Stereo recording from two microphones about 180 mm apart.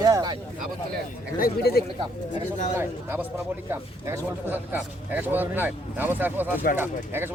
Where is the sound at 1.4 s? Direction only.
60° left (ahead or behind).